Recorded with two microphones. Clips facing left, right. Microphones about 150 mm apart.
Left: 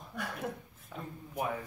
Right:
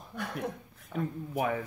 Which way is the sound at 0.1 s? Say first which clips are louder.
Right 3 dB; centre (ahead or behind).